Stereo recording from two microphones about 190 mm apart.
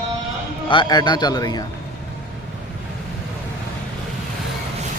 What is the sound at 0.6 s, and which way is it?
Speech, 25° left (ahead or behind).